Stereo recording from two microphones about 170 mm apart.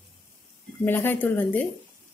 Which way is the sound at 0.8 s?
10° left (ahead or behind).